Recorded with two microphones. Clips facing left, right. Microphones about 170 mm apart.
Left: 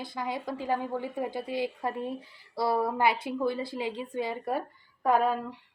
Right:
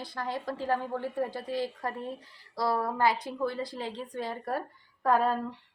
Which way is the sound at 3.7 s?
15° left (ahead or behind).